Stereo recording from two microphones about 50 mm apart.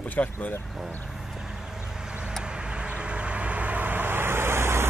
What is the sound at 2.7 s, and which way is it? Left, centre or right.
Vehicle, right.